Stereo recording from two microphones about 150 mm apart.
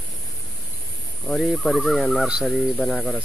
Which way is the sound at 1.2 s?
Centre (ahead or behind).